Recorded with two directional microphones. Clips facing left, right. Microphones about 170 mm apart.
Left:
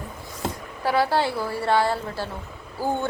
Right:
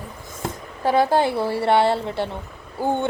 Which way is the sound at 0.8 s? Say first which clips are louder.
Right 4 dB; 20° right (ahead or behind).